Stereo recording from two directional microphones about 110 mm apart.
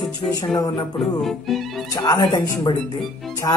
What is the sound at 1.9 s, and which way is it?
Speech, 35° left (ahead or behind).